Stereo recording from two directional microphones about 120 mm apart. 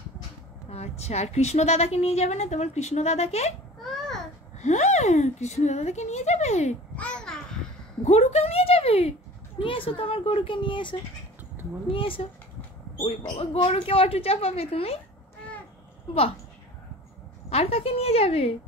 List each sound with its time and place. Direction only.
0.7 s a woman's voice: 60° left (ahead or behind)
4.6 s speech: 75° left (ahead or behind)
7.0 s babbling: 5° left (ahead or behind)
8.0 s a woman's voice: 70° left (ahead or behind)
17.5 s a woman's voice: 55° left (ahead or behind)